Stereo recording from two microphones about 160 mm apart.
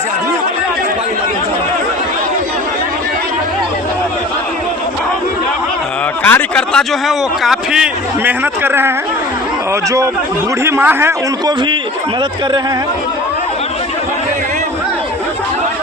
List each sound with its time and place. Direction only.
6.2 s a man's voice: 10° left (ahead or behind); by 8.9 s 15° right (ahead or behind)
10.6 s a man's voice: 15° right (ahead or behind)